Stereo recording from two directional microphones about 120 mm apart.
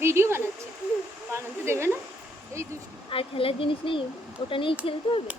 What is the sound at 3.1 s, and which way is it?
Speech, 50° left (ahead or behind).